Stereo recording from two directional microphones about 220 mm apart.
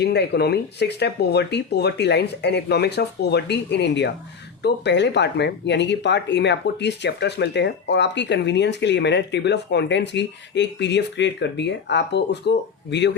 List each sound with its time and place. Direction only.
0.0 s speech: 50° left (ahead or behind)